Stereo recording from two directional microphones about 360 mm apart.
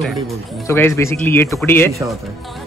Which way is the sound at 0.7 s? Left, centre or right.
Centre.